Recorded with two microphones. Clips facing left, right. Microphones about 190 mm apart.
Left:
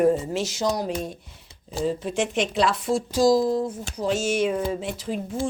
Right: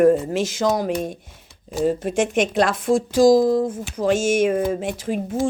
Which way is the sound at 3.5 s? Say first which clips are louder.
Right 5 dB; 90° right.